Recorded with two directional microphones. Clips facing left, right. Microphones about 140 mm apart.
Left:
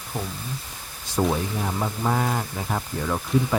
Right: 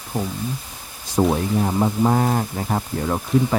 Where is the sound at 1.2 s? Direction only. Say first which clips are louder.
Right 5 dB; 30° right (ahead or behind).